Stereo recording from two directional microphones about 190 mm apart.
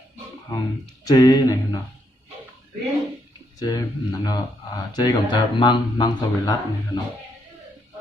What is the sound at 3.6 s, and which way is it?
A man's voice, 20° left (ahead or behind).